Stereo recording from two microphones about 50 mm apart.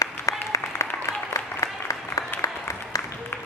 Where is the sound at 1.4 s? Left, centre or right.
Left.